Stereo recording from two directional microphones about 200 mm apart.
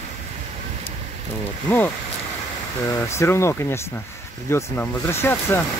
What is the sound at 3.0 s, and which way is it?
Speech, 15° left (ahead or behind).